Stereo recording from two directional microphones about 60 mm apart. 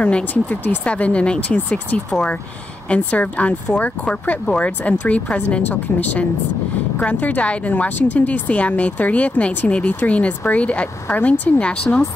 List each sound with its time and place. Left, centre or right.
0.0 s speech: left